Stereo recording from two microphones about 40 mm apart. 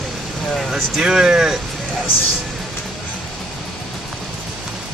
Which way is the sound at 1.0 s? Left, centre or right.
Centre.